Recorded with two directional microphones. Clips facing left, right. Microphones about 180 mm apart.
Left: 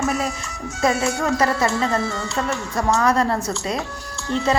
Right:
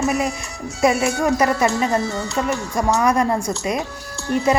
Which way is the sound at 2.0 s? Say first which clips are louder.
Right 1 dB; 40° right (ahead or behind).